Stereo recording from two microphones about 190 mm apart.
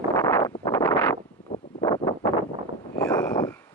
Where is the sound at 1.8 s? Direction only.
20° left (ahead or behind).